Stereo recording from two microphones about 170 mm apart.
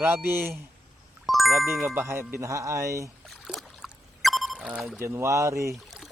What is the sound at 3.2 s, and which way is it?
Rowboat, centre (ahead or behind).